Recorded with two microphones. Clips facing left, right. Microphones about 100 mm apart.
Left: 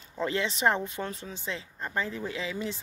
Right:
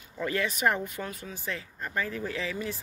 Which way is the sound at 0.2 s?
25° left (ahead or behind).